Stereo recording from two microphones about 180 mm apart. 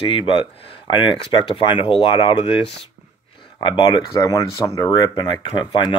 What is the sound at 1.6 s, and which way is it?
Speech, 30° left (ahead or behind).